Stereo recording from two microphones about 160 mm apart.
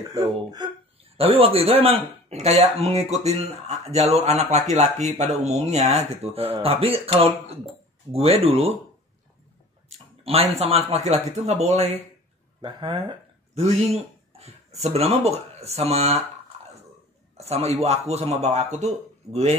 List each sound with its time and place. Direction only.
0.1 s speech: 25° right (ahead or behind)
1.1 s speech: 35° right (ahead or behind)
9.8 s speech: 40° right (ahead or behind)
12.6 s speech: 30° right (ahead or behind)
14.8 s speech: 40° right (ahead or behind)
17.5 s speech: 40° right (ahead or behind)